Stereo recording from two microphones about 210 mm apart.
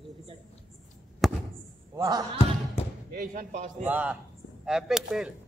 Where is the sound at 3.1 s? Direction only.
40° right (ahead or behind).